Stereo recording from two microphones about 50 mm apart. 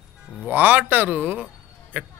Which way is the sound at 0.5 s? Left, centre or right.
Right.